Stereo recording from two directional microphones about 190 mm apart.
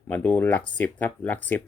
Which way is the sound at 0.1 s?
10° left (ahead or behind).